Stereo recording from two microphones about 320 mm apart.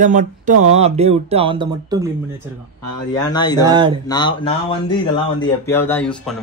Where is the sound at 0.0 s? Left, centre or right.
Right.